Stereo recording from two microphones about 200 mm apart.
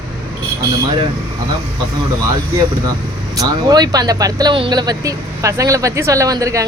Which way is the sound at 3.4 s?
20° right (ahead or behind).